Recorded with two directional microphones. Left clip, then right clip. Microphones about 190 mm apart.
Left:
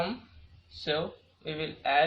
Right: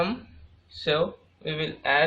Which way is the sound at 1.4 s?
40° right (ahead or behind).